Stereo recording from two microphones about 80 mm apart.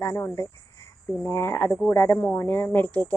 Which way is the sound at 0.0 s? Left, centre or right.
Left.